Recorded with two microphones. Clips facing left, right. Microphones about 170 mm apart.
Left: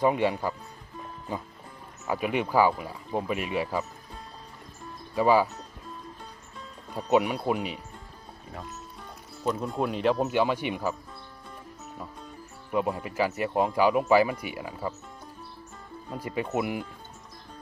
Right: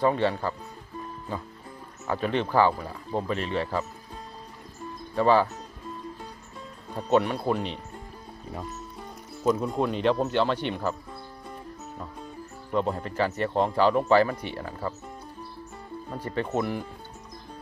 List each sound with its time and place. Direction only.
0.0 s speech: 15° left (ahead or behind)
2.0 s speech: 10° left (ahead or behind)
5.1 s speech: 10° left (ahead or behind)
7.1 s speech: 10° left (ahead or behind)
9.8 s speech: 5° left (ahead or behind)
12.7 s speech: 10° left (ahead or behind)
16.1 s speech: 10° left (ahead or behind)